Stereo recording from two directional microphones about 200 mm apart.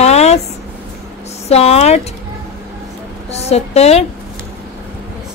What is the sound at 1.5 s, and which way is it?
Speech, 30° left (ahead or behind).